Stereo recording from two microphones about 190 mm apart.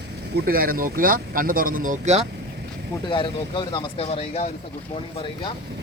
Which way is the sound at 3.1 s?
25° left (ahead or behind).